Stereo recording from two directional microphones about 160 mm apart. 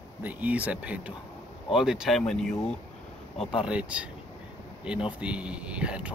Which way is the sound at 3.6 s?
10° right (ahead or behind).